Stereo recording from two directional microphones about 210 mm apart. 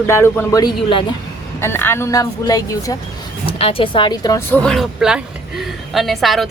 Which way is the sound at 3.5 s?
25° left (ahead or behind).